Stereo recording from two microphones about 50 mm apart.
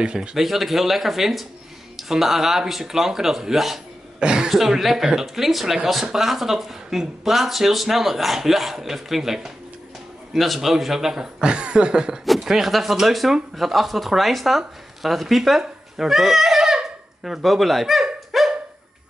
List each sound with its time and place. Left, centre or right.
0.0 s speech: centre
0.4 s speech: centre
4.2 s speech: centre
4.5 s speech: centre
15.0 s a sound: centre
17.4 s speech: centre
18.3 s dog: centre